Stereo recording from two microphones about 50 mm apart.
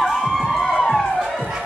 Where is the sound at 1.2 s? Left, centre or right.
Centre.